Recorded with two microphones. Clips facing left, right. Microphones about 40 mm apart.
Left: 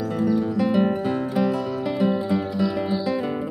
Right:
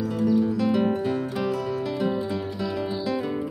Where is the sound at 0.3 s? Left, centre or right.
Centre.